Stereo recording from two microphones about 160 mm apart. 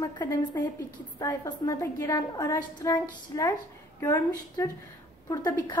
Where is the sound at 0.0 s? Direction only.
25° left (ahead or behind).